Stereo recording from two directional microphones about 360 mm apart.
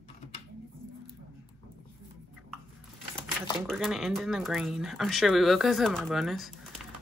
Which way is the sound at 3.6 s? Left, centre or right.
Centre.